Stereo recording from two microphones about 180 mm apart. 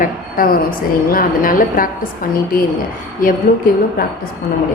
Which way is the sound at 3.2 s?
50° left (ahead or behind).